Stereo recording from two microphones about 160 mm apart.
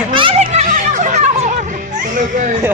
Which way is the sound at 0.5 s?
50° right (ahead or behind).